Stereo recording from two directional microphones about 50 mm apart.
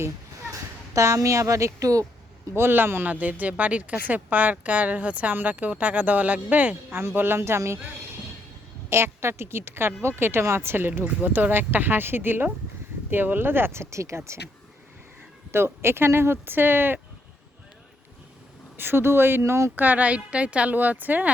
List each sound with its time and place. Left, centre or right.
0.9 s a woman's voice: right
2.5 s speech: right
3.1 s speech: right
6.9 s a woman's voice: right
8.9 s a woman's voice: right
11.0 s speech: right
15.5 s speech: right
18.8 s speech: right
19.4 s speech: right
19.7 s speech: right
20.7 s speech: right